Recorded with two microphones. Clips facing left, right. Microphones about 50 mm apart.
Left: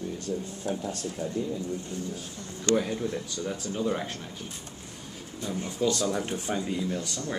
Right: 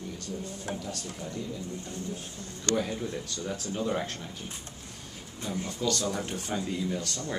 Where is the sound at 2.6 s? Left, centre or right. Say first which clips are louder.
Left 4 dB; centre.